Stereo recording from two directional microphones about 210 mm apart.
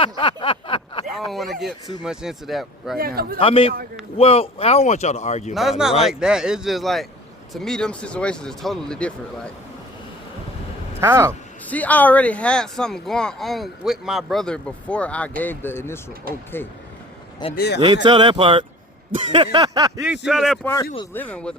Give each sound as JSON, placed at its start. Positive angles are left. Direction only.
{"t": 0.0, "sound": "a sound", "side_deg": 25}
{"t": 1.3, "sound": "speech", "side_deg": 0}
{"t": 3.0, "sound": "a man's voice", "side_deg": -45}
{"t": 3.3, "sound": "a man's voice", "side_deg": 25}
{"t": 5.5, "sound": "speech", "side_deg": 0}
{"t": 11.0, "sound": "speech", "side_deg": -10}
{"t": 11.7, "sound": "speech", "side_deg": 5}
{"t": 17.5, "sound": "speech", "side_deg": 50}
{"t": 17.7, "sound": "speech", "side_deg": -20}
{"t": 20.2, "sound": "speech", "side_deg": 0}